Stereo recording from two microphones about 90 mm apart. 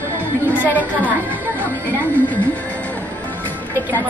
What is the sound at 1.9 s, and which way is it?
Speech, 20° left (ahead or behind).